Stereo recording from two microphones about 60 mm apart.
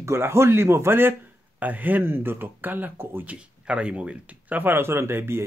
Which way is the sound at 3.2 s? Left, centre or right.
Right.